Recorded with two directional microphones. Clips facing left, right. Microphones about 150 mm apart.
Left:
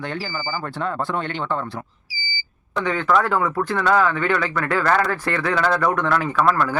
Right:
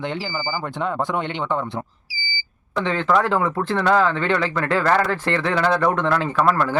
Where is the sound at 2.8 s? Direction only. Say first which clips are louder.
Even; 25° right (ahead or behind).